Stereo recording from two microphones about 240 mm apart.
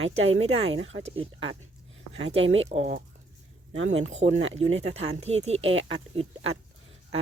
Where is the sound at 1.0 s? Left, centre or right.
Right.